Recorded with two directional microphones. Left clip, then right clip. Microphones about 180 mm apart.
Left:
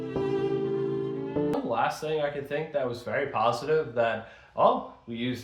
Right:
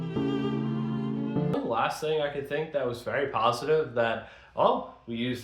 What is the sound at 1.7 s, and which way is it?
Speech, 25° right (ahead or behind).